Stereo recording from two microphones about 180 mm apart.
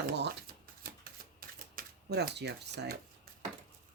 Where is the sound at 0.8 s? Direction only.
55° right (ahead or behind).